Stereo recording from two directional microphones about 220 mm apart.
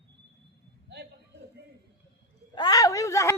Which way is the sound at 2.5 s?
15° left (ahead or behind).